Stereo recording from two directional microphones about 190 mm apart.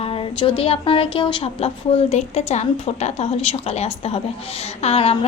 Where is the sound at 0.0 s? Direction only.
30° left (ahead or behind).